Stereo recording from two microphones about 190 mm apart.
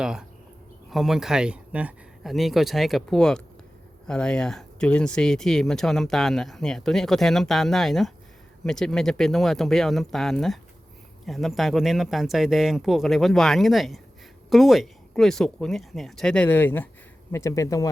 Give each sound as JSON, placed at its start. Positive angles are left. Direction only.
{"t": 0.0, "sound": "speech", "side_deg": -5}